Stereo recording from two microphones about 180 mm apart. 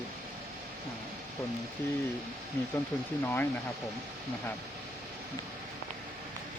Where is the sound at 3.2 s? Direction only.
10° left (ahead or behind).